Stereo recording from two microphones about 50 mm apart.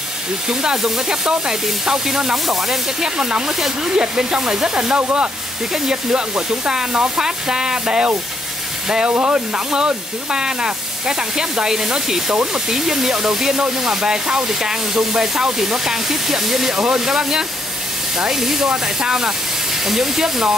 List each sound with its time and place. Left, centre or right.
0.5 s speech: centre